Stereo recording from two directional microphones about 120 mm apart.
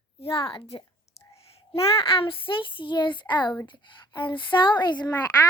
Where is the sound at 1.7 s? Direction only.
50° left (ahead or behind).